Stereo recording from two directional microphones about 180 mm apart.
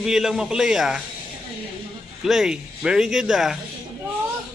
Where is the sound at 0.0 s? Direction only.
5° right (ahead or behind).